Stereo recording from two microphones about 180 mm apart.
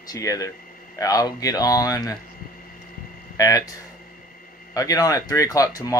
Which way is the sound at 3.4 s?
20° left (ahead or behind).